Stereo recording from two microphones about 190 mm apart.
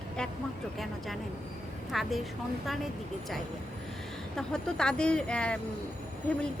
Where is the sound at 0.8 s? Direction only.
Centre (ahead or behind).